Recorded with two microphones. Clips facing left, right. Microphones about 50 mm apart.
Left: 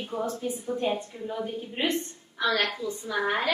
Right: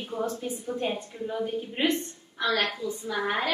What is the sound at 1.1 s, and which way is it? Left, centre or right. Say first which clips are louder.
A woman's voice: right 2 dB; centre.